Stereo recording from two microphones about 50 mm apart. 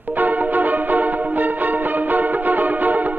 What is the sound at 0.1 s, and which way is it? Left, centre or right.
Music, right.